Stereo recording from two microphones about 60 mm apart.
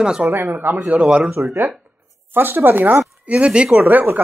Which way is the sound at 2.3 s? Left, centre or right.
Right.